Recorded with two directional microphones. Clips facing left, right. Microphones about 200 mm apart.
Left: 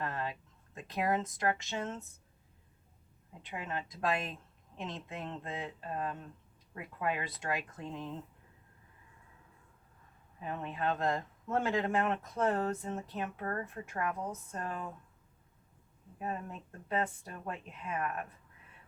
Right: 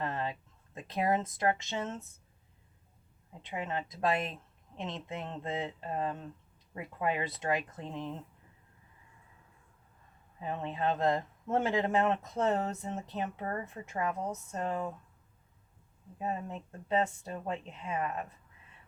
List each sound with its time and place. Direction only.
0.0 s a sound: 25° right (ahead or behind)
3.5 s speech: 25° right (ahead or behind)
10.4 s speech: 25° right (ahead or behind)
16.1 s speech: 25° right (ahead or behind)